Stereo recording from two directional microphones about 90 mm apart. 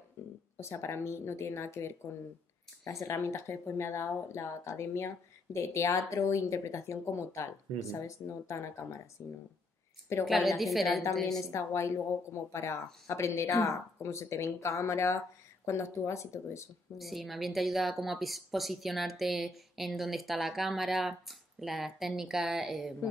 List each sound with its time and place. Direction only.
0.2 s a sound: 30° left (ahead or behind)
0.6 s speech: 30° left (ahead or behind)
10.2 s a woman's voice: centre (ahead or behind)
11.5 s speech: 35° left (ahead or behind)
16.9 s a woman's voice: centre (ahead or behind)